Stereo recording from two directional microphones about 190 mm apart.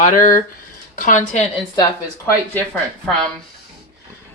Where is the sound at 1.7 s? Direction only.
20° left (ahead or behind).